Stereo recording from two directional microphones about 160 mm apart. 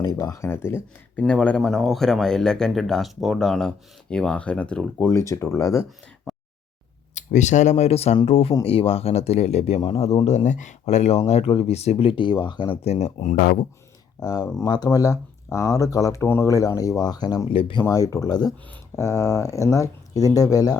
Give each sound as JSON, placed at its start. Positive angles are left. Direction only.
{"t": 0.0, "sound": "a man's voice", "side_deg": 25}
{"t": 6.3, "sound": "a sound", "side_deg": 0}
{"t": 7.1, "sound": "speech", "side_deg": 50}
{"t": 14.2, "sound": "speech", "side_deg": 25}
{"t": 17.8, "sound": "speech", "side_deg": 20}